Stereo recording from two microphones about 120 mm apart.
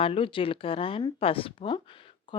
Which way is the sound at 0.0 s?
50° left (ahead or behind).